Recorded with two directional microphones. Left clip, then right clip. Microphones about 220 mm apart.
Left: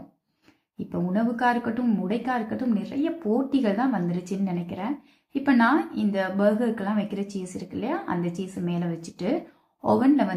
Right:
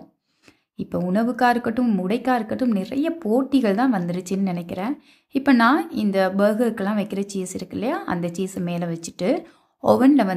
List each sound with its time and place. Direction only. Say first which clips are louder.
0.9 s speech: right 5 dB; 45° right (ahead or behind)